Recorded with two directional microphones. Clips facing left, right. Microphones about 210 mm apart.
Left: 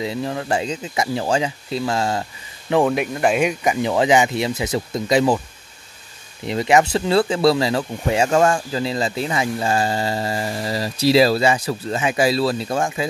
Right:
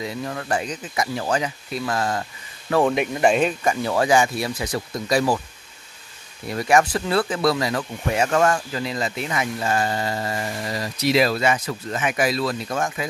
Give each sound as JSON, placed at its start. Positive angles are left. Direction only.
{"t": 0.0, "sound": "speech", "side_deg": 25}
{"t": 2.8, "sound": "speech", "side_deg": 0}
{"t": 6.4, "sound": "speech", "side_deg": 20}